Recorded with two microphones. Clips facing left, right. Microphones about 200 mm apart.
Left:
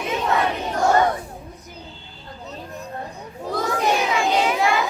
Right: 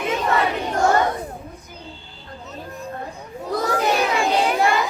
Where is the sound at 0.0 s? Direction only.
Centre (ahead or behind).